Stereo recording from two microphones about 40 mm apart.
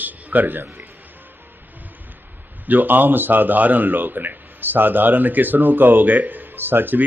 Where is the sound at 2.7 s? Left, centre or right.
Right.